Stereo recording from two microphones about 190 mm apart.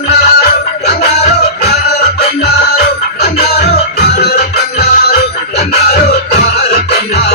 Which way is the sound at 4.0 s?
55° left (ahead or behind).